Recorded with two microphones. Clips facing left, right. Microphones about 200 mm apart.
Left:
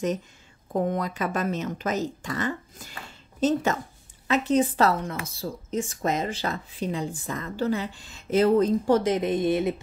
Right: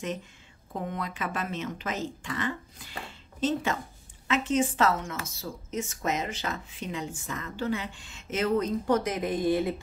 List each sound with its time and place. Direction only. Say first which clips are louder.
0.7 s speech: left 8 dB; 40° left (ahead or behind); by 9.8 s 20° left (ahead or behind)